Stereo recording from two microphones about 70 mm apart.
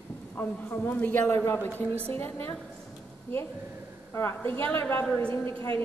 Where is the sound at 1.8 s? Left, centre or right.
Right.